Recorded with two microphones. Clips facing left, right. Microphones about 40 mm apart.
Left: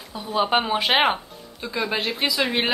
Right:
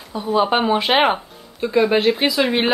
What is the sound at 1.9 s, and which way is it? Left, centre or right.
Speech, right.